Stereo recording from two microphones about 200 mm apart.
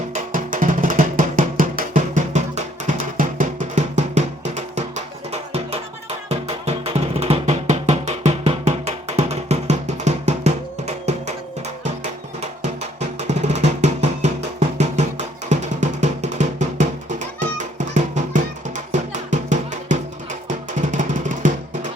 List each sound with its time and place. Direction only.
0.1 s music: 45° right (ahead or behind)
13.0 s drum: 35° right (ahead or behind)
14.8 s music: 35° right (ahead or behind)